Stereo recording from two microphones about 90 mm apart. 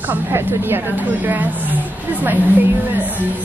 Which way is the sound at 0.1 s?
25° right (ahead or behind).